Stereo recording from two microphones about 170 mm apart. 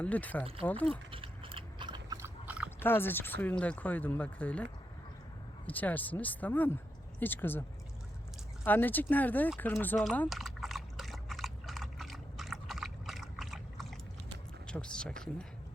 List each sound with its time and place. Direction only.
0.0 s speech: 10° left (ahead or behind)
1.1 s biting: 30° right (ahead or behind); by 2.7 s 10° right (ahead or behind)
2.8 s speech: 15° left (ahead or behind)
8.6 s speech: 10° left (ahead or behind)
9.8 s liquid: 10° left (ahead or behind)
14.7 s speech: 5° left (ahead or behind)